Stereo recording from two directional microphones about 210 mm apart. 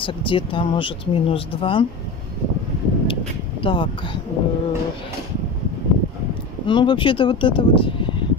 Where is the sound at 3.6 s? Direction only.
25° left (ahead or behind).